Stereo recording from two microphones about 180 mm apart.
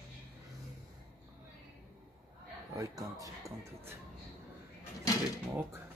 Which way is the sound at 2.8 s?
20° right (ahead or behind).